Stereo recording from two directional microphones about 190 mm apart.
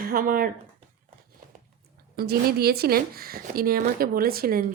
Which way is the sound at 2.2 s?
55° right (ahead or behind).